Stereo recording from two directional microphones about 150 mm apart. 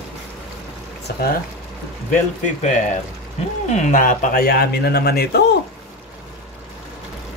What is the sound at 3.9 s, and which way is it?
Speech, 60° left (ahead or behind).